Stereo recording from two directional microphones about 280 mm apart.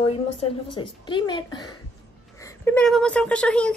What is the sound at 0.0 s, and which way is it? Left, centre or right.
A woman's voice, centre.